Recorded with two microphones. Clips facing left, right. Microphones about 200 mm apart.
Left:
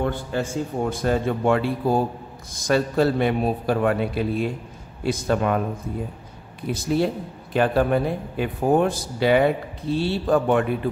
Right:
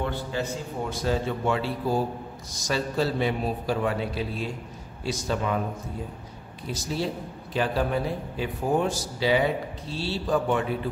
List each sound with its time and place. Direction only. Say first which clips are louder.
0.0 s a man's voice: left 4 dB; 50° left (ahead or behind)
6.7 s a man's voice: left 7 dB; 55° left (ahead or behind)